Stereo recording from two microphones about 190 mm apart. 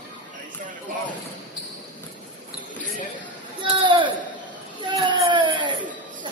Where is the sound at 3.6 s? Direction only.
25° right (ahead or behind).